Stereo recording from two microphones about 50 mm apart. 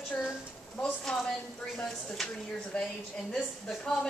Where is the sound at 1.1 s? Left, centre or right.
Centre.